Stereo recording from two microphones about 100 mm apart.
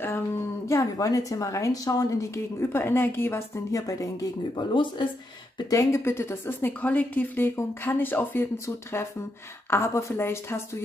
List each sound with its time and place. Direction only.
0.7 s a woman's voice: 30° left (ahead or behind)
4.6 s speech: 50° left (ahead or behind)
5.7 s a woman's voice: 30° left (ahead or behind)